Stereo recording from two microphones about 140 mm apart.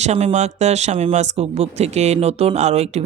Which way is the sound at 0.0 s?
55° right (ahead or behind).